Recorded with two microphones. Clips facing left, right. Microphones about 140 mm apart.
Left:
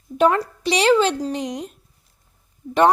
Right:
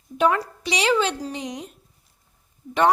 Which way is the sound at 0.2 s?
35° left (ahead or behind).